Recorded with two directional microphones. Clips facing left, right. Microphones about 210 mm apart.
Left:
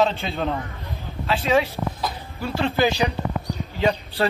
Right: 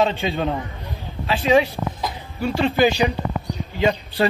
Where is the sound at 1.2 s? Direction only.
15° right (ahead or behind).